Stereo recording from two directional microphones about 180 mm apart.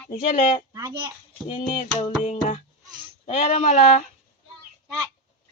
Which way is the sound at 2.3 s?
40° left (ahead or behind).